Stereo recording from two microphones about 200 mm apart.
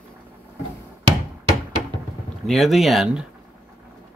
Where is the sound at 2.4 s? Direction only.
Centre (ahead or behind).